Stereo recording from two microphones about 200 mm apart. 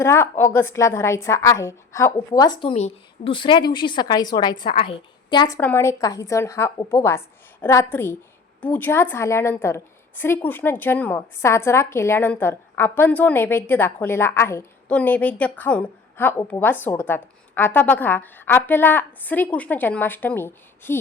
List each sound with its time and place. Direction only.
0.0 s a woman's voice: 10° left (ahead or behind)
5.5 s a woman's voice: 10° left (ahead or behind)